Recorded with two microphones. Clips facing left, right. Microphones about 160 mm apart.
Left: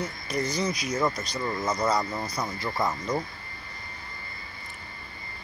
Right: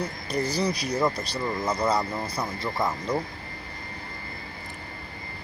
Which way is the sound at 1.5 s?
10° right (ahead or behind).